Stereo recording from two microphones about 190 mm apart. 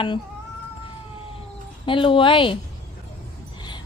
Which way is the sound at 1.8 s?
25° left (ahead or behind).